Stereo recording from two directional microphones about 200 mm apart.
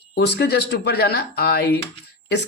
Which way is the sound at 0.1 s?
55° left (ahead or behind).